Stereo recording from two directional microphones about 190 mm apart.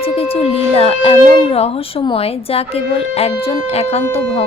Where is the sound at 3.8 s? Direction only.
35° left (ahead or behind).